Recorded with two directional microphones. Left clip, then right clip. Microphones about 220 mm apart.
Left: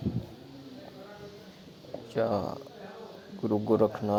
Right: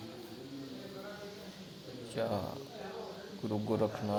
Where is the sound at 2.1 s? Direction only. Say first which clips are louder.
Left 7 dB; 30° left (ahead or behind).